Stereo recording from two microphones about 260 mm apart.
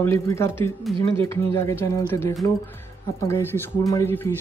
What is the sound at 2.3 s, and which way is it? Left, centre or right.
Speech, centre.